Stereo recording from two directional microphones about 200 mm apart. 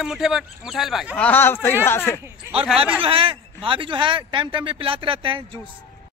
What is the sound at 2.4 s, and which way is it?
Speech, 10° right (ahead or behind).